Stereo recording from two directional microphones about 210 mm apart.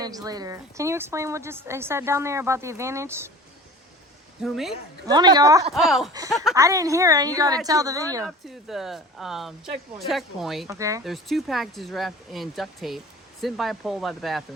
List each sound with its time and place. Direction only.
0.0 s a woman's voice: 15° right (ahead or behind)
4.4 s speech: centre (ahead or behind)
5.0 s a woman's voice: 20° right (ahead or behind)
5.7 s speech: centre (ahead or behind)
6.5 s a woman's voice: 15° right (ahead or behind)
8.4 s speech: centre (ahead or behind)
10.7 s a woman's voice: 15° right (ahead or behind)
11.0 s speech: centre (ahead or behind)